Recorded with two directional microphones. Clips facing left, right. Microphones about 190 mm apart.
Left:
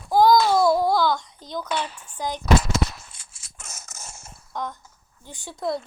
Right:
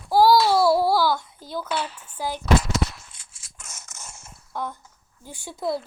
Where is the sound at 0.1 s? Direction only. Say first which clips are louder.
Even; 5° right (ahead or behind).